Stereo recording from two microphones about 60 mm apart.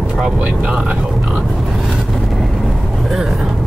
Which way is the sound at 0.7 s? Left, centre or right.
Centre.